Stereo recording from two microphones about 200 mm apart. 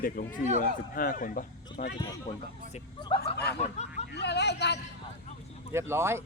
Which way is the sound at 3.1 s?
25° left (ahead or behind).